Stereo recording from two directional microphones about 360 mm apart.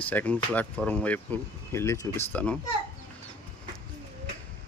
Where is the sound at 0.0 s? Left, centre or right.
Centre.